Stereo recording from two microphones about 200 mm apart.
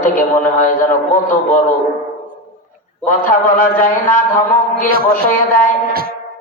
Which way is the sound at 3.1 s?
40° left (ahead or behind).